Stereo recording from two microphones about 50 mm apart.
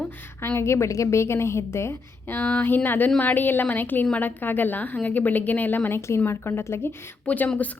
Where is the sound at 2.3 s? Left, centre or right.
Left.